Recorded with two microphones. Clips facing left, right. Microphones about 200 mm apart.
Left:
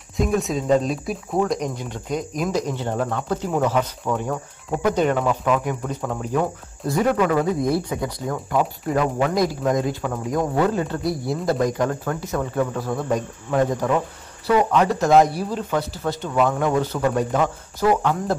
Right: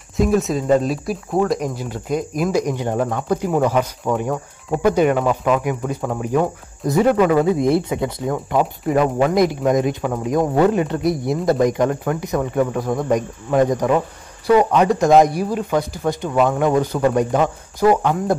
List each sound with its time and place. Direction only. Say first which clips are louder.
0.2 s speech: right 4 dB; centre (ahead or behind)